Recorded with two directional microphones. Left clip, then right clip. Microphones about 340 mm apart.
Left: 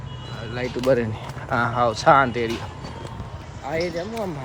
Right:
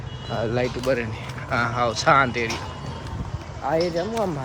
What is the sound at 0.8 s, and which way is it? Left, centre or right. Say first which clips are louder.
Speech: left 3 dB; centre.